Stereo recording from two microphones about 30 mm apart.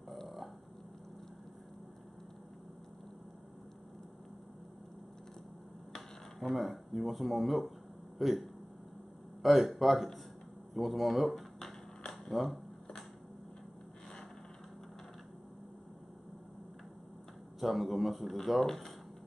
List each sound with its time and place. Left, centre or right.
6.4 s speech: centre
12.1 s a sound: centre
17.6 s speech: centre
18.7 s speech: centre